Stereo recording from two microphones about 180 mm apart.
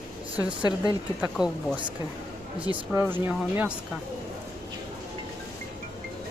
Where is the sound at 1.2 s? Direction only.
5° right (ahead or behind).